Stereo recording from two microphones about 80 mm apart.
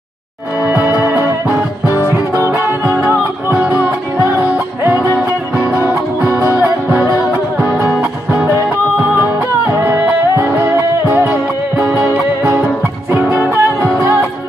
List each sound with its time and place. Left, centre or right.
0.7 s music: right
2.6 s music: right
6.4 s music: right
9.1 s music: right
13.2 s music: right